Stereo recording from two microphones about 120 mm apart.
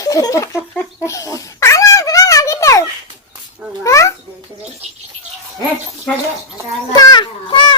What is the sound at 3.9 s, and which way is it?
Babbling, 25° left (ahead or behind).